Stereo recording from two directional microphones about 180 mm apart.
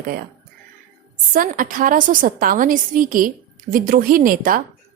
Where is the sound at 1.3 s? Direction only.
50° right (ahead or behind).